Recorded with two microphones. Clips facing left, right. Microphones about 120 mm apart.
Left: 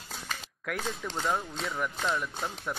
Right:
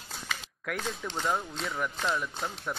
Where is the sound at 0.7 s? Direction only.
Centre (ahead or behind).